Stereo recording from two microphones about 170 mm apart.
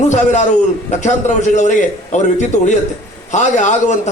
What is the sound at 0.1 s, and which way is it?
A man's voice, 45° left (ahead or behind).